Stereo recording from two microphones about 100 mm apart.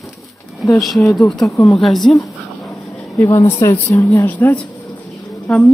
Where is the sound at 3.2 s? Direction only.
30° left (ahead or behind).